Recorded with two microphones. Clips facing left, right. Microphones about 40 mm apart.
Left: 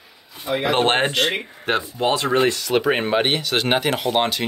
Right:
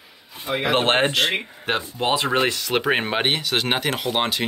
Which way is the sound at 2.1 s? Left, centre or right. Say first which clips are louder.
Left 2 dB; right.